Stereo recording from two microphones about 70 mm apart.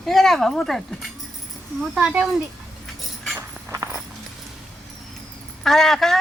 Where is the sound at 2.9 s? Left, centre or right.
Centre.